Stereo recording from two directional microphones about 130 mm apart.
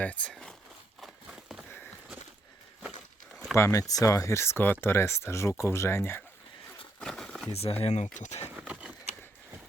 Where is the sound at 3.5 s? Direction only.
25° left (ahead or behind).